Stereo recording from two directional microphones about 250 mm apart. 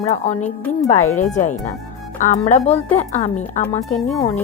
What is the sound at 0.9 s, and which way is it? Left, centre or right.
Speech, left.